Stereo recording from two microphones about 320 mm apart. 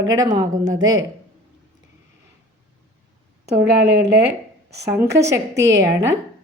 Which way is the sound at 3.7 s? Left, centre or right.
Right.